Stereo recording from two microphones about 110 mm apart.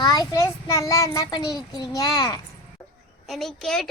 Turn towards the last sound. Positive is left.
turn(degrees=5)  # may be behind; listen again after turning